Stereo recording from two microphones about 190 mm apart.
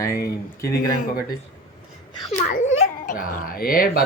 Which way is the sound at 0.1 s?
55° left (ahead or behind).